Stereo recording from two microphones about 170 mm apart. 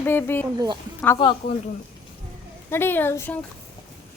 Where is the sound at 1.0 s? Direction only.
25° left (ahead or behind).